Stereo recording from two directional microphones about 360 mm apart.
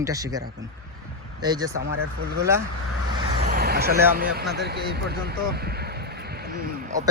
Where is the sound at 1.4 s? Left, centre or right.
Centre.